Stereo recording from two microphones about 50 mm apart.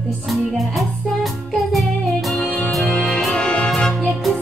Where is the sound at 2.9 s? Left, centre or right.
Centre.